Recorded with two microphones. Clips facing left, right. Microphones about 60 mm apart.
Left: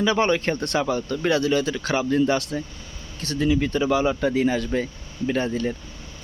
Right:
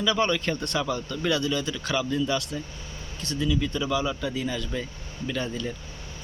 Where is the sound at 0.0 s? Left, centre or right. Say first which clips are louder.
Left 4 dB; left.